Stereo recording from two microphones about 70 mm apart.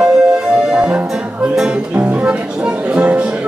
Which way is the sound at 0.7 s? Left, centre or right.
Centre.